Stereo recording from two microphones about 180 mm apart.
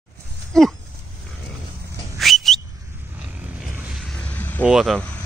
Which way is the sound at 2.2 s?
Centre (ahead or behind).